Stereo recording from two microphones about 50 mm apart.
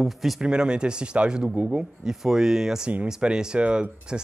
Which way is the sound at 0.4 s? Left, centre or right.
Centre.